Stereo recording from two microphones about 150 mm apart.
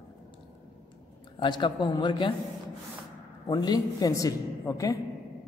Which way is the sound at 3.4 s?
25° left (ahead or behind).